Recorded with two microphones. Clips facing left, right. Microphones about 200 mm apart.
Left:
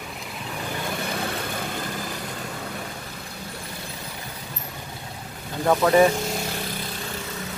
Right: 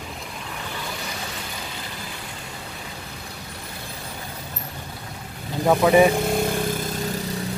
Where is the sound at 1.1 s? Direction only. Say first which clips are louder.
Left 5 dB; 55° left (ahead or behind).